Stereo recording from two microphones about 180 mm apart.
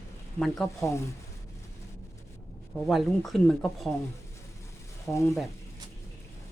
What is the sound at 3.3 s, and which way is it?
Speech, 5° left (ahead or behind).